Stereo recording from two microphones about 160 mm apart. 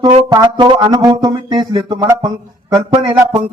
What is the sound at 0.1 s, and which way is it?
Speech, 40° right (ahead or behind).